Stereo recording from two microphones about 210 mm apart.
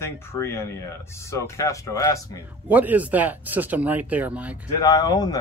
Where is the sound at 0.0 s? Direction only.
10° left (ahead or behind).